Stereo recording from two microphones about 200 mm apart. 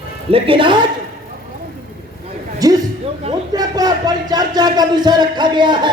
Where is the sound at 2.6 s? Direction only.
20° right (ahead or behind).